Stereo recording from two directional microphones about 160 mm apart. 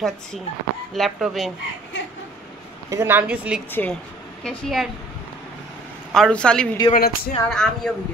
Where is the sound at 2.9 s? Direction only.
15° right (ahead or behind).